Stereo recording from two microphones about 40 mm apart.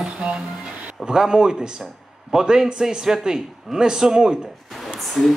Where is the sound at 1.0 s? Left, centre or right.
Centre.